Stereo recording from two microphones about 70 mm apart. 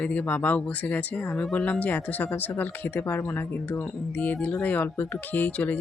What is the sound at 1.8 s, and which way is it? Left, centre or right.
Speech, left.